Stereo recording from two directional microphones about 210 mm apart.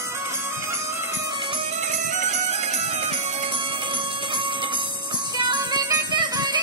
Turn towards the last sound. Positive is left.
turn(degrees=-20)  # may be behind; listen again after turning